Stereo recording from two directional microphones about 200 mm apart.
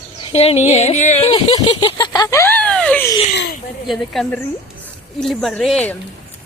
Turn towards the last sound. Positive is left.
turn(degrees=5)  # may be behind; listen again after turning